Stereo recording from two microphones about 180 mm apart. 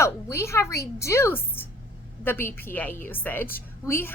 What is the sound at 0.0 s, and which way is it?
A woman's voice, 15° left (ahead or behind).